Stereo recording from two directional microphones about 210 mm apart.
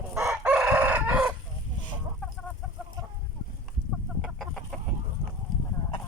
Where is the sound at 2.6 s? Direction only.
Centre (ahead or behind).